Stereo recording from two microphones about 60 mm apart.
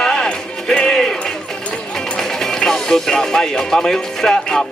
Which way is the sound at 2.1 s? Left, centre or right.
Centre.